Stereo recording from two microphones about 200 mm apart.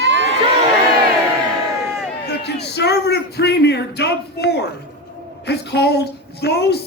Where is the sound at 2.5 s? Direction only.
55° left (ahead or behind).